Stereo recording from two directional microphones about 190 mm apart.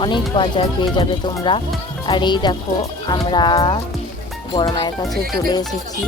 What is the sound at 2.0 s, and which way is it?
Speech, 25° left (ahead or behind).